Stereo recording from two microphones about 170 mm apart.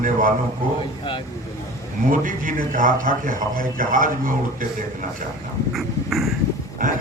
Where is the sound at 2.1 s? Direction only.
50° right (ahead or behind).